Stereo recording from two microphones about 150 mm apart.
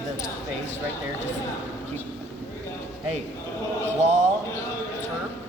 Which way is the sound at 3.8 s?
50° right (ahead or behind).